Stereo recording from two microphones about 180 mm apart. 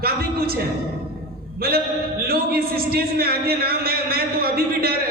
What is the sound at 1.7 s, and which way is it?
A man's voice, 60° right (ahead or behind).